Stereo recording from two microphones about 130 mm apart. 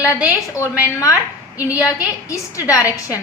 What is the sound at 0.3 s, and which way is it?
A woman's voice, 20° left (ahead or behind).